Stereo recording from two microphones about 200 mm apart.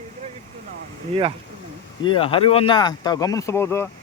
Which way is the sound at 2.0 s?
25° left (ahead or behind).